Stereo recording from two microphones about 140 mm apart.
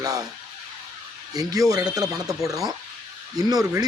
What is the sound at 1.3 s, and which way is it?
A man's voice, 25° right (ahead or behind).